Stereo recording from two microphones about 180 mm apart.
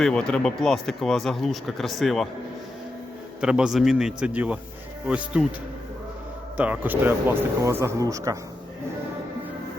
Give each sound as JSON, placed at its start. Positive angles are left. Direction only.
{"t": 0.0, "sound": "speech", "side_deg": 5}
{"t": 3.4, "sound": "speech", "side_deg": -5}
{"t": 6.6, "sound": "speech", "side_deg": -10}